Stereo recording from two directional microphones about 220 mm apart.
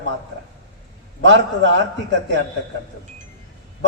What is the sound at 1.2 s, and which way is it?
Speech, 55° right (ahead or behind).